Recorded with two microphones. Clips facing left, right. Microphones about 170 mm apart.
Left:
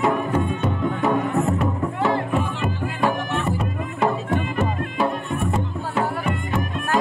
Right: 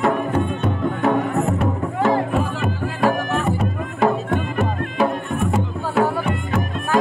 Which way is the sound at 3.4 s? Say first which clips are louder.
Right 3 dB; centre (ahead or behind).